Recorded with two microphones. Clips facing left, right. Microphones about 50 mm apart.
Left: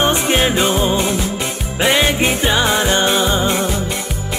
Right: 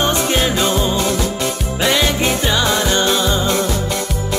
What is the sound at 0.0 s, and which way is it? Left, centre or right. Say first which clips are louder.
Music: left 1 dB; left.